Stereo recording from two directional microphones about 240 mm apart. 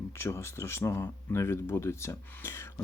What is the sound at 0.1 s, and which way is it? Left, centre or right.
Speech, centre.